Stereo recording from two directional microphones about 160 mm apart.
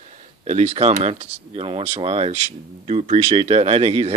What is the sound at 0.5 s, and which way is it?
Speech, 45° right (ahead or behind).